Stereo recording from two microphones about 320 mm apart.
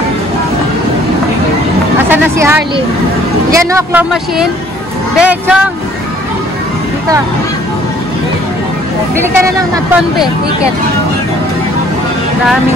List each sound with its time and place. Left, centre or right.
2.0 s music: centre
3.5 s speech: centre
10.1 s speech: centre